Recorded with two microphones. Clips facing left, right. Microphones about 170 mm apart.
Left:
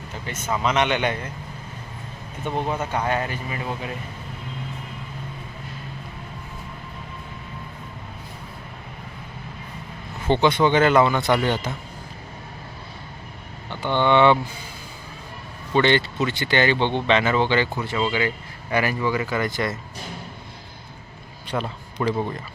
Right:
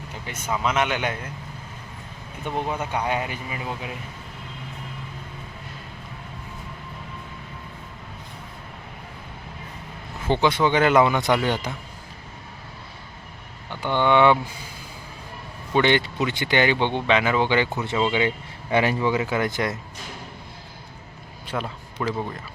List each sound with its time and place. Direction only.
0.3 s speech: 10° right (ahead or behind)
2.4 s speech: 10° right (ahead or behind)
10.2 s speech: 5° right (ahead or behind)
13.7 s speech: 10° right (ahead or behind)
15.7 s speech: 15° right (ahead or behind)
21.5 s a man's voice: 5° right (ahead or behind)